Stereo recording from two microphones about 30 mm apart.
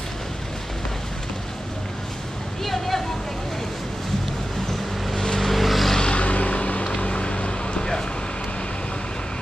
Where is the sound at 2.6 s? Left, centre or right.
Centre.